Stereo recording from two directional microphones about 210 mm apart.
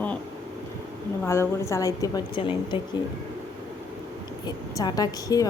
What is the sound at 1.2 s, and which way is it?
A woman's voice, 10° left (ahead or behind).